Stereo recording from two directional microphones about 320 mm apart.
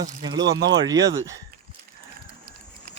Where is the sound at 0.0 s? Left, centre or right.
Centre.